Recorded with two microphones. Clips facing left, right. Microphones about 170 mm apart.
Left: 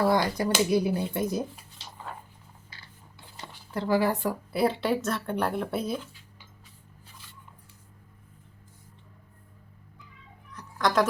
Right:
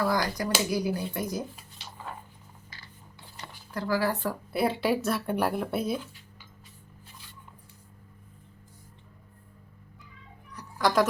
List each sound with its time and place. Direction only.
0.0 s speech: 25° left (ahead or behind)
3.8 s speech: 25° left (ahead or behind)
4.5 s speech: centre (ahead or behind)
10.8 s music: 5° right (ahead or behind)